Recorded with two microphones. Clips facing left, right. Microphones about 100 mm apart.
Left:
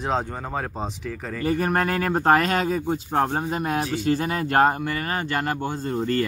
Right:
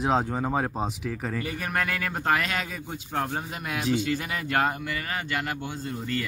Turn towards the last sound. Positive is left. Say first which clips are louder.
# left 7 dB
turn(degrees=40)  # may be behind; listen again after turning